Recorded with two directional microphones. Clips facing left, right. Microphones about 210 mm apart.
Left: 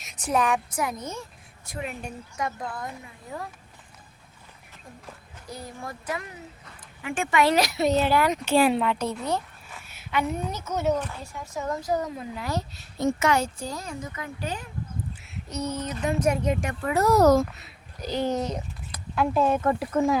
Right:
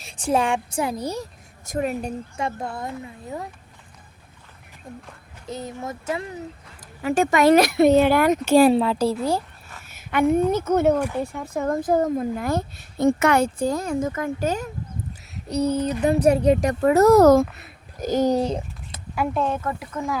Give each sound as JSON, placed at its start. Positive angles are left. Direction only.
{"t": 0.0, "sound": "a woman's voice", "side_deg": -30}
{"t": 5.5, "sound": "a woman's voice", "side_deg": -20}
{"t": 7.0, "sound": "speech", "side_deg": -40}
{"t": 9.9, "sound": "a woman's voice", "side_deg": -50}
{"t": 15.4, "sound": "speech", "side_deg": -35}
{"t": 19.3, "sound": "speech", "side_deg": 5}
{"t": 19.6, "sound": "speech", "side_deg": 30}